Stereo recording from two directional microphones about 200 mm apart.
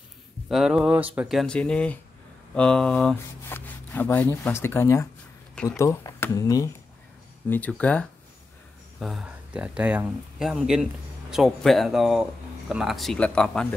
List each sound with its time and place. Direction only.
0.5 s speech: centre (ahead or behind)